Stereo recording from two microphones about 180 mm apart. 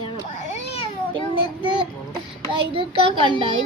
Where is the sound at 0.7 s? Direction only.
30° left (ahead or behind).